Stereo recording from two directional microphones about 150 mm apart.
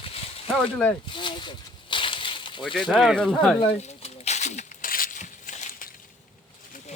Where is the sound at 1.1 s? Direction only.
30° left (ahead or behind).